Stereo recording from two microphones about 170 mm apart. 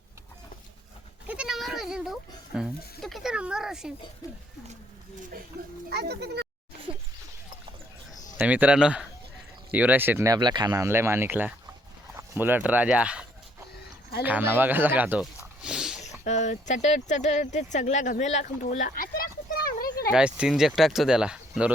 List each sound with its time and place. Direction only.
1.3 s goat: 5° right (ahead or behind)
2.6 s speech: centre (ahead or behind)
5.9 s speech: 75° right (ahead or behind)
8.4 s speech: 10° right (ahead or behind)
14.3 s snake: 10° right (ahead or behind)
16.2 s speech: 45° left (ahead or behind); by 20.1 s 60° left (ahead or behind)
20.1 s speech: 5° right (ahead or behind)